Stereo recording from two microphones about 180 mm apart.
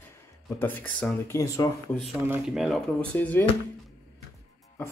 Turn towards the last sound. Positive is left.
turn(degrees=10)  # may be behind; listen again after turning